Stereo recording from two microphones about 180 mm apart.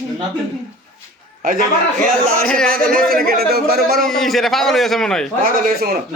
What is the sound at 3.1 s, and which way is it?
Speech, 55° right (ahead or behind).